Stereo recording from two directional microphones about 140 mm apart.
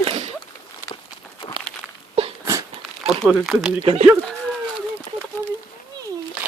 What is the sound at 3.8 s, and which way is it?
Speech, 50° right (ahead or behind).